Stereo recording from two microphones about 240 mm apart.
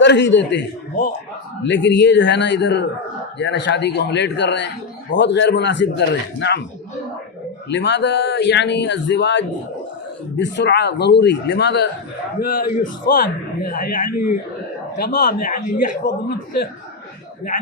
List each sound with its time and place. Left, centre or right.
0.0 s speech: left
7.7 s a man's voice: left